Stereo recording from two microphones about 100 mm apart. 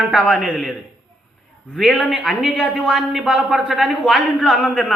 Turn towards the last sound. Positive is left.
turn(degrees=15)  # may be behind; listen again after turning